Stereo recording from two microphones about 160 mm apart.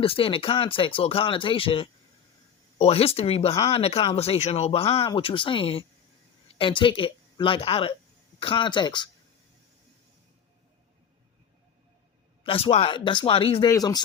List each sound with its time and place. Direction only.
0.0 s speech: 35° left (ahead or behind)
12.4 s speech: 35° left (ahead or behind)
13.7 s speech: 25° left (ahead or behind)